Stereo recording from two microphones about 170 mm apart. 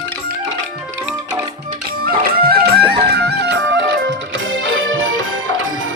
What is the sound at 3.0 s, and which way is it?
Music, 70° right (ahead or behind).